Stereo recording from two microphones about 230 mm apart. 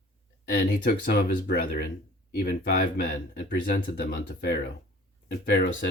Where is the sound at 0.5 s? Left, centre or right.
Left.